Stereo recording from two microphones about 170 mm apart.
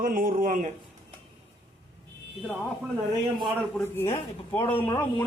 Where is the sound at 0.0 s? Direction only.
55° right (ahead or behind).